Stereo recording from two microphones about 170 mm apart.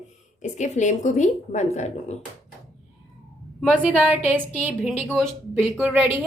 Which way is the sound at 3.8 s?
5° right (ahead or behind).